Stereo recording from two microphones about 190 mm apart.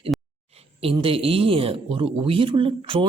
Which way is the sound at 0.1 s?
Centre (ahead or behind).